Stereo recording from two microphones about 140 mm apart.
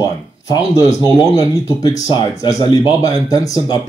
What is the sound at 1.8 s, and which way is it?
Speech, 25° left (ahead or behind).